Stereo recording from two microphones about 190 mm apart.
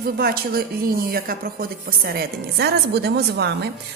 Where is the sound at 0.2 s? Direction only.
55° right (ahead or behind).